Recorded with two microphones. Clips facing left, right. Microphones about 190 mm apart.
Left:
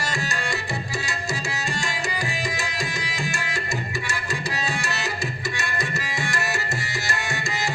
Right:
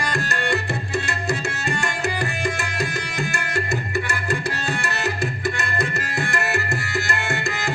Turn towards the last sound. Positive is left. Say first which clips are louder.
# right 3 dB
turn(degrees=-55)  # may be behind; listen again after turning